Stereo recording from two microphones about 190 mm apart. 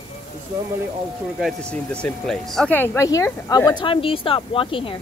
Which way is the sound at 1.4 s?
5° left (ahead or behind).